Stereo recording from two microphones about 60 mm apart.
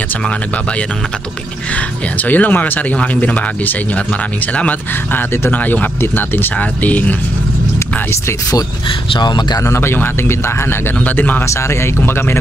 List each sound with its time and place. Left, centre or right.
2.1 s speech: left
9.8 s speech: left
11.1 s speech: left
11.4 s speech: left
12.1 s speech: left